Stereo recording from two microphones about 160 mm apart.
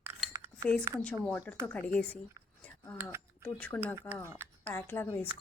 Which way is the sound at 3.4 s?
10° left (ahead or behind).